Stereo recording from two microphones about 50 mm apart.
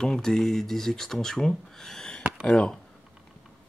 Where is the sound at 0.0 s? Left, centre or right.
Centre.